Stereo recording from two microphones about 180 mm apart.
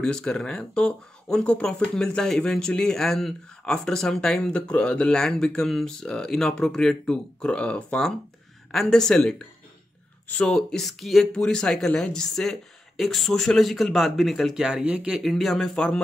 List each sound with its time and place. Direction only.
0.0 s speech: 5° left (ahead or behind)